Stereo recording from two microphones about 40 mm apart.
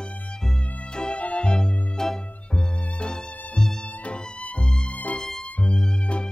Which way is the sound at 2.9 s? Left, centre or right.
Left.